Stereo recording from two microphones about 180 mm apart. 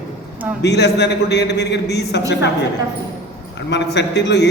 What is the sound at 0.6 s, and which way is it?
A man's voice, 70° left (ahead or behind).